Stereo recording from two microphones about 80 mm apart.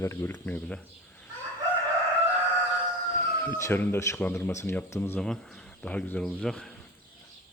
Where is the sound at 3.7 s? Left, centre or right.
Left.